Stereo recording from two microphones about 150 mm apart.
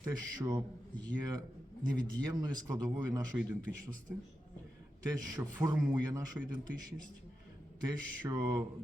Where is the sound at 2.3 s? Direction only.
25° right (ahead or behind).